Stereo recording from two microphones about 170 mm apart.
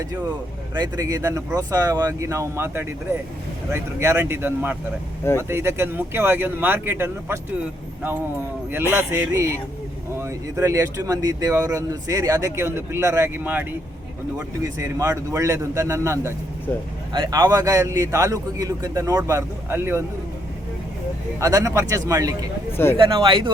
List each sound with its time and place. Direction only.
0.8 s speech: 20° right (ahead or behind)
8.9 s speech: 15° right (ahead or behind)
21.4 s speech: 20° right (ahead or behind)